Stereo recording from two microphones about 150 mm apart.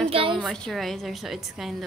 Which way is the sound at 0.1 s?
35° right (ahead or behind).